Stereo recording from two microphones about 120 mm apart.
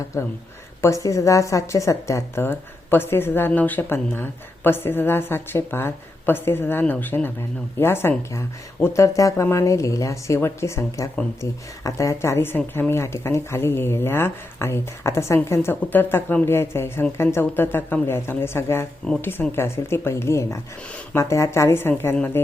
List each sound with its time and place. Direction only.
0.8 s a woman's voice: 25° left (ahead or behind)